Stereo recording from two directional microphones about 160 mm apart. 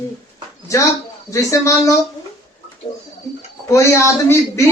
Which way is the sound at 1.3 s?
20° left (ahead or behind).